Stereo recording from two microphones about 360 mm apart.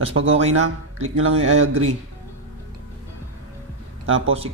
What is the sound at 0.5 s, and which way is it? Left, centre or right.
Speech, right.